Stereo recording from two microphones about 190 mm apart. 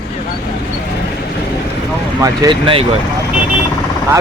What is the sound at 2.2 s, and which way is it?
Speech, 25° right (ahead or behind).